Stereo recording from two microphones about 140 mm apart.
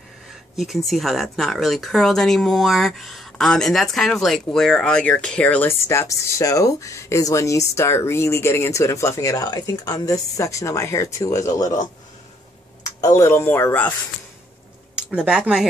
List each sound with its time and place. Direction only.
0.6 s speech: centre (ahead or behind); by 11.8 s 25° left (ahead or behind)
13.0 s speech: 20° left (ahead or behind)
15.0 s speech: 5° right (ahead or behind)